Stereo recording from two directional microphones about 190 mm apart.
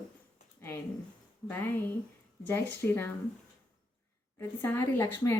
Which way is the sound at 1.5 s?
10° left (ahead or behind).